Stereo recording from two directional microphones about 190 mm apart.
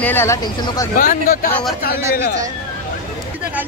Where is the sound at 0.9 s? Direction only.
50° left (ahead or behind).